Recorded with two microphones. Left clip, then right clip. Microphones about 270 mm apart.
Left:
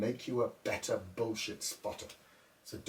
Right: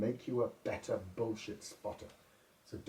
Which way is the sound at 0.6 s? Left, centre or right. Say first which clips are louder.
Left 3 dB; centre.